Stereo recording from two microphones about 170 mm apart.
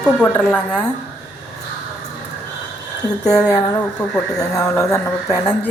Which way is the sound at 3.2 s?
20° left (ahead or behind).